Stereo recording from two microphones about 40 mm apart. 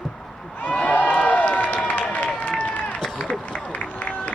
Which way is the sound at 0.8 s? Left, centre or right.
Left.